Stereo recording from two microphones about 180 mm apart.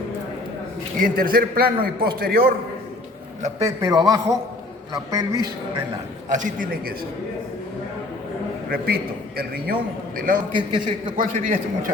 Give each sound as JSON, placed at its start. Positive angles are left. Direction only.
{"t": 0.9, "sound": "a man's voice", "side_deg": -50}
{"t": 3.6, "sound": "a man's voice", "side_deg": -20}
{"t": 6.3, "sound": "a man's voice", "side_deg": -45}
{"t": 8.7, "sound": "a man's voice", "side_deg": -55}
{"t": 10.7, "sound": "a man's voice", "side_deg": -25}
{"t": 11.2, "sound": "a man's voice", "side_deg": -50}